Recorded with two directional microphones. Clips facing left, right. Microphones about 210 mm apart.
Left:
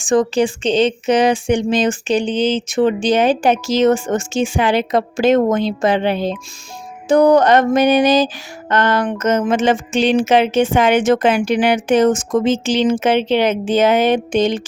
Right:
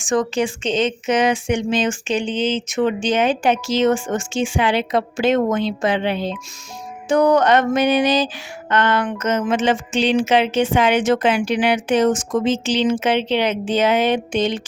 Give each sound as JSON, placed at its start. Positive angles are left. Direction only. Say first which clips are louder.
{"t": 0.0, "sound": "speech", "louder": "left 4 dB", "side_deg": 30}